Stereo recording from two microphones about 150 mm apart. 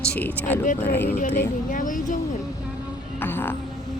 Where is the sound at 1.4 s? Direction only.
60° left (ahead or behind).